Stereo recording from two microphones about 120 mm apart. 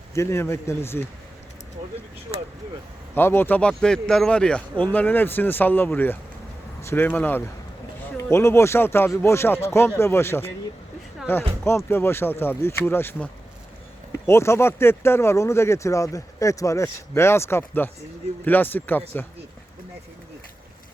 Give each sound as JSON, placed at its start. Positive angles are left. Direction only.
{"t": 0.1, "sound": "speech", "side_deg": 25}
{"t": 3.2, "sound": "speech", "side_deg": 20}
{"t": 14.3, "sound": "speech", "side_deg": 20}